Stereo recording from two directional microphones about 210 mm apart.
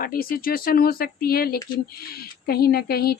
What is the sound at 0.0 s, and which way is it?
Speech, 45° left (ahead or behind).